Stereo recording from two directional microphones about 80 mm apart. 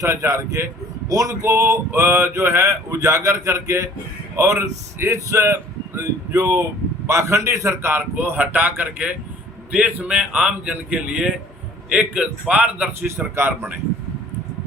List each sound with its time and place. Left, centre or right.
0.0 s a man's voice: right